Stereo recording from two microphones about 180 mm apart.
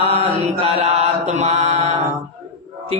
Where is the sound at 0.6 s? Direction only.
35° right (ahead or behind).